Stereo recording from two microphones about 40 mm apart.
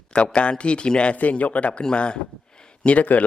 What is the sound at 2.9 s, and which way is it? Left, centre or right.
Speech, left.